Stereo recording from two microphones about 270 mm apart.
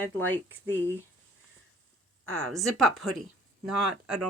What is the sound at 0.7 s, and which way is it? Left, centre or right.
Speech, centre.